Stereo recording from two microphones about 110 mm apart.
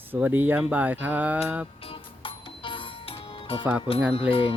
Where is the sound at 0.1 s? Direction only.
15° right (ahead or behind).